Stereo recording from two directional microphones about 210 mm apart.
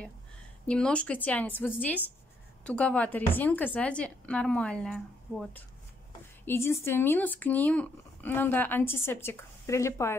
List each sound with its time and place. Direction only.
0.7 s a woman's voice: 5° left (ahead or behind)